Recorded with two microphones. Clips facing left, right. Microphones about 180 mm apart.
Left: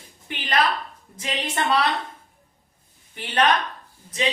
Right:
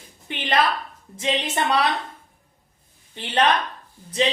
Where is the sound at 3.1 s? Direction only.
25° right (ahead or behind).